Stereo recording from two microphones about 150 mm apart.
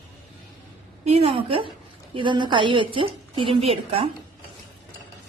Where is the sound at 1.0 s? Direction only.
45° right (ahead or behind).